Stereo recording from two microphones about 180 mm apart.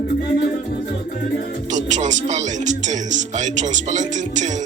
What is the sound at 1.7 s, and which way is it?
Speech, 40° right (ahead or behind).